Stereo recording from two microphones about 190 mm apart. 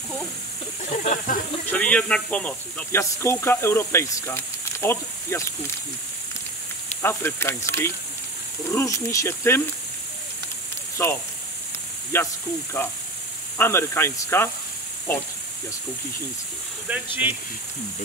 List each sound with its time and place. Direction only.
0.8 s snake: 40° left (ahead or behind)
1.7 s speech: 10° left (ahead or behind)
7.0 s speech: 10° left (ahead or behind)
11.0 s speech: 15° left (ahead or behind)
13.6 s speech: 15° left (ahead or behind)
16.9 s speech: 10° right (ahead or behind)